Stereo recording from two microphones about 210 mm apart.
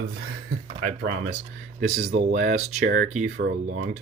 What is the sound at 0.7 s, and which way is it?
Speech, 35° right (ahead or behind).